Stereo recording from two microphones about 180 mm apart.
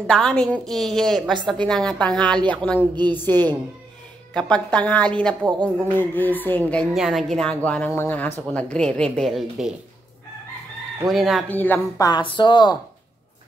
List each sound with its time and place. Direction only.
0.0 s a woman's voice: 5° left (ahead or behind)
11.1 s a woman's voice: centre (ahead or behind)
11.5 s speech: 10° left (ahead or behind)
12.1 s speech: 25° left (ahead or behind)